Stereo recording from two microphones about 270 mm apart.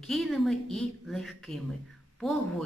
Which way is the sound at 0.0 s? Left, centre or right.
Centre.